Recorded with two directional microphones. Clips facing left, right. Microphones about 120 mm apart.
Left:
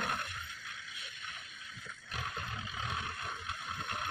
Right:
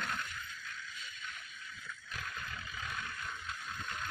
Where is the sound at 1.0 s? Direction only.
70° left (ahead or behind).